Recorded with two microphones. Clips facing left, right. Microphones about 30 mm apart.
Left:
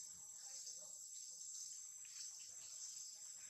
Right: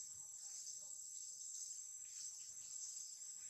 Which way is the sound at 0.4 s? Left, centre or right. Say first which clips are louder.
Even; left.